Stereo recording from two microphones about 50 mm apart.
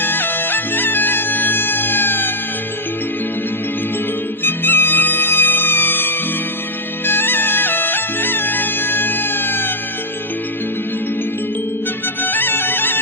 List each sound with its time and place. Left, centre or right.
0.0 s music: left
4.4 s music: left
12.2 s music: left